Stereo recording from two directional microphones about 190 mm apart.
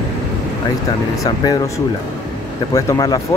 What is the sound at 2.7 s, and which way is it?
Speech, 20° left (ahead or behind).